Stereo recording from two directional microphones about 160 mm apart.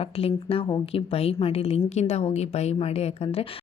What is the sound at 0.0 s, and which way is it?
A woman's voice, 35° left (ahead or behind).